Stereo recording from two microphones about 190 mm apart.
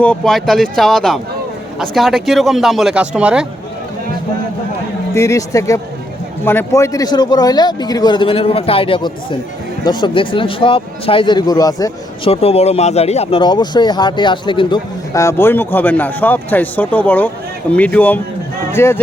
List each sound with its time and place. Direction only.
0.0 s speech: 5° left (ahead or behind)
5.1 s speech: 15° left (ahead or behind)
12.3 s speech: 30° left (ahead or behind); by 18.9 s 15° left (ahead or behind)